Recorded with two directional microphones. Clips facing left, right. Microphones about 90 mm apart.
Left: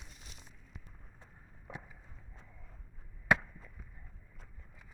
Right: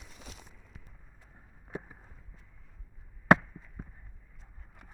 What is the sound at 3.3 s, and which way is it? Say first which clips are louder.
Chop: right 7 dB; 50° right (ahead or behind).